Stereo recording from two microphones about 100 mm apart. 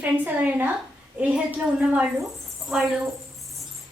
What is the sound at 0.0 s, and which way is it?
A woman's voice, 15° right (ahead or behind).